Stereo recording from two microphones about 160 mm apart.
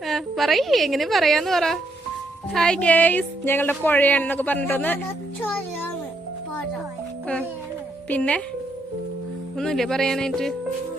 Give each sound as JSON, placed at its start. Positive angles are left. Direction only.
{"t": 0.0, "sound": "a woman's voice", "side_deg": 0}
{"t": 8.1, "sound": "speech", "side_deg": 10}
{"t": 9.6, "sound": "a woman's voice", "side_deg": 5}